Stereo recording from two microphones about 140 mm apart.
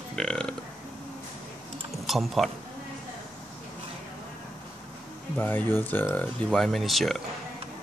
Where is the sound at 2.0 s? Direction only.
Centre (ahead or behind).